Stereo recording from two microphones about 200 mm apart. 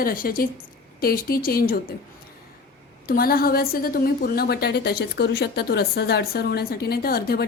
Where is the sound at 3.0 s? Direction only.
50° left (ahead or behind).